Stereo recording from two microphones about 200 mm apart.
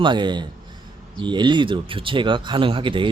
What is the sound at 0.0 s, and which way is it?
Speech, 25° right (ahead or behind).